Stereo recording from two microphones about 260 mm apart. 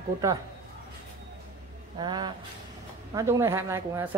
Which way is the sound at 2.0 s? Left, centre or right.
Centre.